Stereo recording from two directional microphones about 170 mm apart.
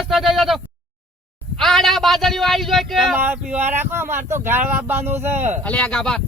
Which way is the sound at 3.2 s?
10° right (ahead or behind).